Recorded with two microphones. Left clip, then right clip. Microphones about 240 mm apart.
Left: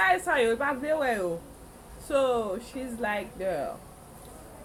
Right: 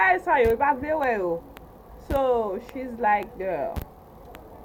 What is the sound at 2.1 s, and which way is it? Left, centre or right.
A woman's voice, left.